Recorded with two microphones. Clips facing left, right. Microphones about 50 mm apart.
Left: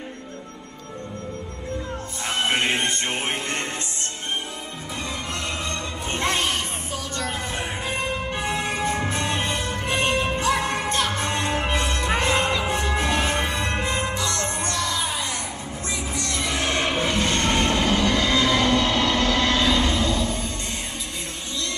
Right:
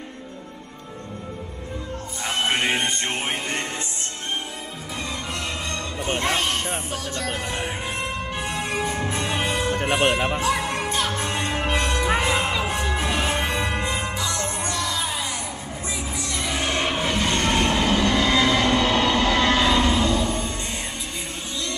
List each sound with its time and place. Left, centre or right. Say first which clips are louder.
2.2 s music: even; centre
5.7 s music: right 2 dB; centre
9.8 s music: right 1 dB; centre
10.5 s music: left 1 dB; centre
18.8 s train: right 1 dB; centre